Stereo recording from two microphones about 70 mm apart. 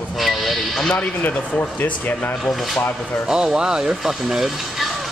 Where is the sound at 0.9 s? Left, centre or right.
Centre.